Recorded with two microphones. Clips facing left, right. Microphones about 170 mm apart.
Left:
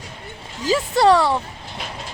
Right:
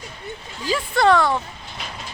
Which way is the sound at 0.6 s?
40° left (ahead or behind).